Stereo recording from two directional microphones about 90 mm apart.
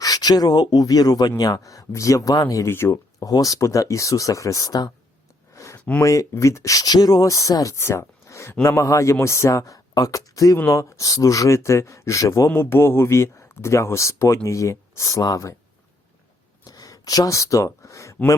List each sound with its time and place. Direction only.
0.0 s speech: 45° left (ahead or behind)
2.6 s speech: 30° left (ahead or behind)
5.5 s a sound: 35° left (ahead or behind)
6.0 s speech: 35° left (ahead or behind)
12.5 s speech: 25° left (ahead or behind)
16.6 s speech: 45° left (ahead or behind)